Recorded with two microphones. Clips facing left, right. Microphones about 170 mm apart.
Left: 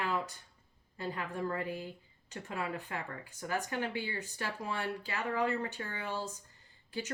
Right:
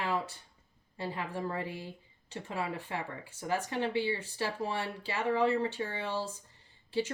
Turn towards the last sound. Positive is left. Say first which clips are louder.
# right 8 dB
turn(degrees=-25)  # may be behind; listen again after turning